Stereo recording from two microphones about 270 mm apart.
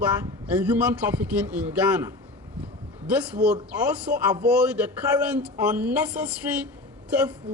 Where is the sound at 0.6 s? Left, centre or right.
Centre.